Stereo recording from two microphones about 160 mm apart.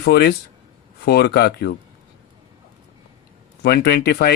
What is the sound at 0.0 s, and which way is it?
Speech, 90° left.